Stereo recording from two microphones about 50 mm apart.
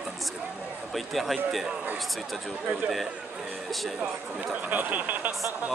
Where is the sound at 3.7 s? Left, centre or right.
Centre.